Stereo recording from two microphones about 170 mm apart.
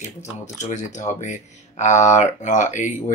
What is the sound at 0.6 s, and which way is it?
Speech, 45° left (ahead or behind).